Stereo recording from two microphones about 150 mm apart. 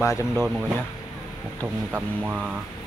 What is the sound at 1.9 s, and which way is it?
Speech, 10° right (ahead or behind).